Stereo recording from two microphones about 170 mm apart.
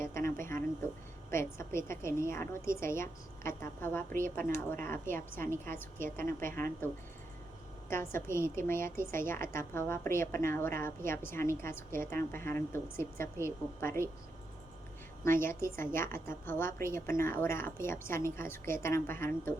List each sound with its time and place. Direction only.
0.0 s a woman's voice: 15° left (ahead or behind)
15.2 s a woman's voice: 15° left (ahead or behind)